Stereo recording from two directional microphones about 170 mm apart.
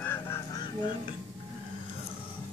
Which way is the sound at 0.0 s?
15° left (ahead or behind).